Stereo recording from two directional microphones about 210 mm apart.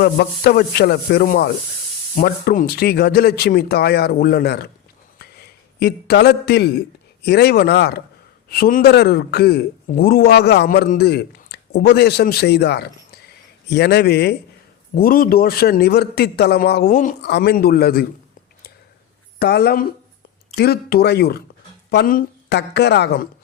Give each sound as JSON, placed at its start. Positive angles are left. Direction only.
{"t": 0.0, "sound": "a man's voice", "side_deg": 50}
{"t": 5.2, "sound": "a sound", "side_deg": 50}
{"t": 7.3, "sound": "a man's voice", "side_deg": 50}
{"t": 19.4, "sound": "a man's voice", "side_deg": 50}